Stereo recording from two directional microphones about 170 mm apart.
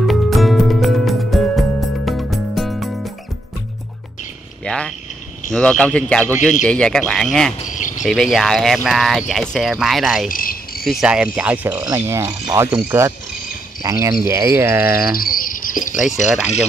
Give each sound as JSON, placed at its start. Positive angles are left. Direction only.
{"t": 0.0, "sound": "music", "side_deg": 0}
{"t": 4.6, "sound": "a sound", "side_deg": 5}
{"t": 5.5, "sound": "speech", "side_deg": 5}
{"t": 7.6, "sound": "cricket", "side_deg": 45}
{"t": 8.0, "sound": "speech", "side_deg": 0}
{"t": 10.2, "sound": "cricket", "side_deg": 55}
{"t": 10.9, "sound": "speech", "side_deg": -5}
{"t": 15.1, "sound": "cricket", "side_deg": 55}